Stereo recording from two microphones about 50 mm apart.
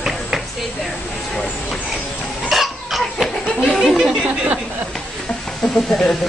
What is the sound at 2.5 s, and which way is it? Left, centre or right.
Cough, centre.